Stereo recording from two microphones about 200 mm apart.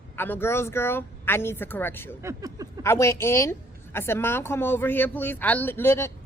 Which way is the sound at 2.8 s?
15° left (ahead or behind).